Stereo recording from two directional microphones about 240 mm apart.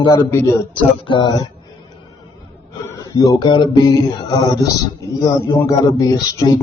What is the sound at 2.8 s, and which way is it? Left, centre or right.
Mantra, centre.